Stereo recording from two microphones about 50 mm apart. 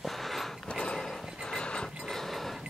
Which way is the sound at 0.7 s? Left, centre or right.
Centre.